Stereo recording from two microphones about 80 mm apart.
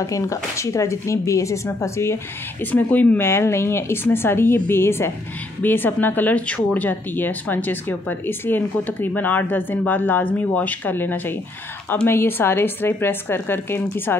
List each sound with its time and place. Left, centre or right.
0.0 s speech: left
2.6 s speech: left
3.3 s speech: left